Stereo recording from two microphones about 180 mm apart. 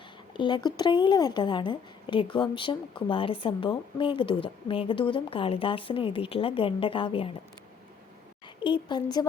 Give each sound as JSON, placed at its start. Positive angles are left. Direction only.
{"t": 0.3, "sound": "a woman's voice", "side_deg": 25}
{"t": 8.6, "sound": "a woman's voice", "side_deg": 25}